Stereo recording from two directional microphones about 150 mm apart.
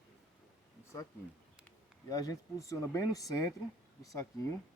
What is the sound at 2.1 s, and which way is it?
Speech, 25° left (ahead or behind).